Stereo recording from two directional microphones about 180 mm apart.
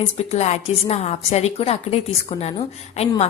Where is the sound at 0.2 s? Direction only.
40° left (ahead or behind).